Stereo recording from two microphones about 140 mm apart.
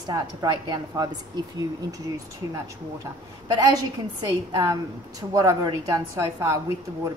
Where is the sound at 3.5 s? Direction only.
30° right (ahead or behind).